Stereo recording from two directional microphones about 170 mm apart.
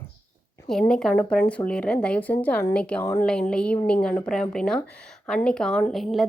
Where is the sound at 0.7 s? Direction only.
5° left (ahead or behind).